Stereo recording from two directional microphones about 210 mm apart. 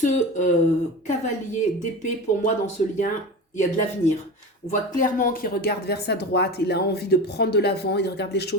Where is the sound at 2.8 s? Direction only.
35° left (ahead or behind).